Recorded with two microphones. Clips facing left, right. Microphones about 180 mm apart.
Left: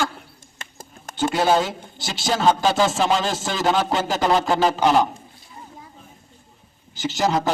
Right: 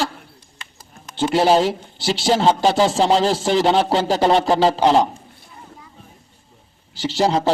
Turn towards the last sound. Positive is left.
turn(degrees=-30)  # may be behind; listen again after turning